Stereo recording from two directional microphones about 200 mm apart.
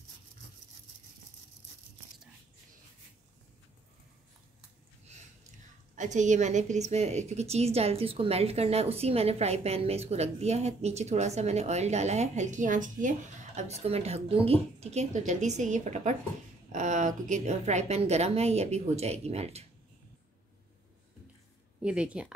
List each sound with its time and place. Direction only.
5.9 s a woman's voice: 35° right (ahead or behind)
21.8 s speech: 5° right (ahead or behind)